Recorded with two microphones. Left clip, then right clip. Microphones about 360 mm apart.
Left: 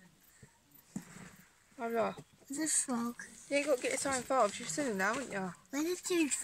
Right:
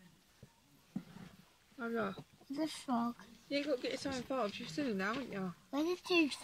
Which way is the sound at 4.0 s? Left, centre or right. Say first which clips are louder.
Left 7 dB; centre.